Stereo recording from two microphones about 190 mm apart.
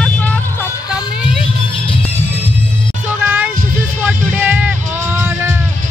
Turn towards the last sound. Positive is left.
turn(degrees=-10)  # may be behind; listen again after turning